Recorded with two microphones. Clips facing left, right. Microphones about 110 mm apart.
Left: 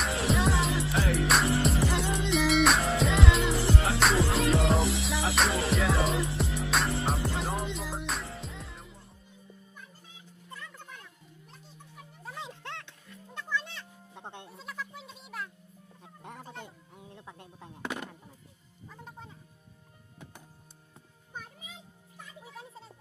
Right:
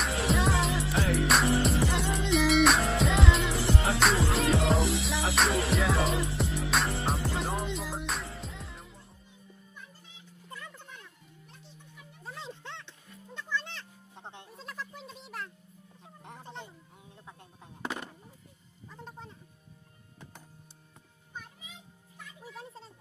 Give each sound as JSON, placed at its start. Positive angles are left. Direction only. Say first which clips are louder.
{"t": 0.0, "sound": "music", "louder": "even", "side_deg": 0}
{"t": 14.2, "sound": "music", "louder": "left 1 dB", "side_deg": 5}
{"t": 16.6, "sound": "a sound", "louder": "left 3 dB", "side_deg": 60}
{"t": 18.9, "sound": "music", "louder": "right 1 dB", "side_deg": 5}